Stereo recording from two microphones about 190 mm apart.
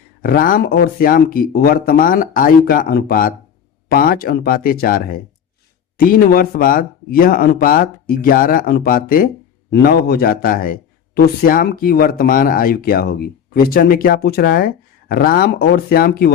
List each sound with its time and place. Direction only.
0.2 s a man's voice: 50° left (ahead or behind)